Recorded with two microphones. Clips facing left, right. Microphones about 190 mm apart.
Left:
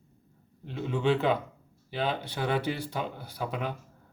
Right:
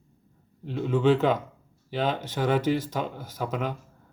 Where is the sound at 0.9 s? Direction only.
45° right (ahead or behind).